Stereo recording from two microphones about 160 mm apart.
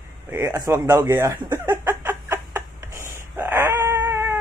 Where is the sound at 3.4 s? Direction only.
15° right (ahead or behind).